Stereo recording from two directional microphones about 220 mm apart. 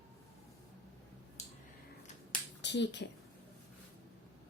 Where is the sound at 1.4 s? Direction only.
30° left (ahead or behind).